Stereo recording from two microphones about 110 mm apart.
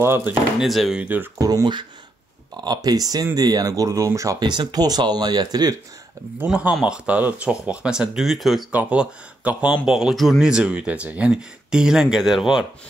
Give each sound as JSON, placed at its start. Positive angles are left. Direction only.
{"t": 0.0, "sound": "speech", "side_deg": -20}
{"t": 0.6, "sound": "speech", "side_deg": 0}
{"t": 1.0, "sound": "speech", "side_deg": -15}
{"t": 1.4, "sound": "speech", "side_deg": -35}
{"t": 6.4, "sound": "speech", "side_deg": -10}